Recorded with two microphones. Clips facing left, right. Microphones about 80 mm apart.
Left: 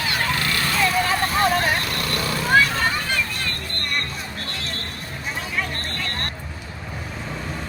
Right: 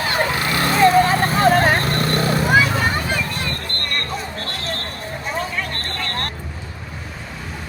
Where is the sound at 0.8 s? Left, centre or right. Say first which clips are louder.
Right 8 dB; right.